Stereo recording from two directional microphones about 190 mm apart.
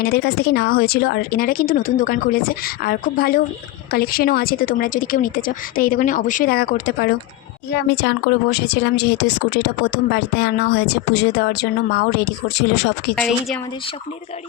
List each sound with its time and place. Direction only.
0.0 s a woman's voice: 55° left (ahead or behind)
13.1 s a woman's voice: 5° left (ahead or behind)